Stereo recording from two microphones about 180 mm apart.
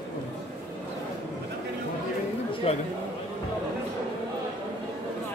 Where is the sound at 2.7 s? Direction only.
35° left (ahead or behind).